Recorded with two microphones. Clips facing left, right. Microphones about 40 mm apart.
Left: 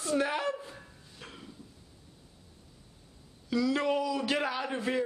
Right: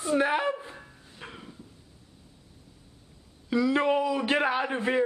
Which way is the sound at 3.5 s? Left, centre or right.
Right.